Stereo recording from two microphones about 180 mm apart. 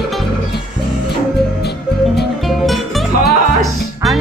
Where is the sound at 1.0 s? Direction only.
65° left (ahead or behind).